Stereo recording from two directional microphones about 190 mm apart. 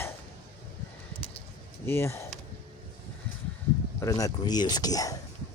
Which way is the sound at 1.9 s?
10° left (ahead or behind).